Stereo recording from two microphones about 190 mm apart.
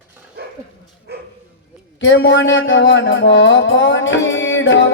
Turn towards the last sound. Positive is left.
turn(degrees=80)